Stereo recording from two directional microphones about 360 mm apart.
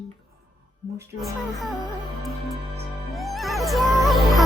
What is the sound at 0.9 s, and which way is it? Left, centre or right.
Speech, centre.